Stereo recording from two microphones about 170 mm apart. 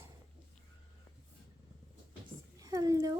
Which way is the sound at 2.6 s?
20° right (ahead or behind).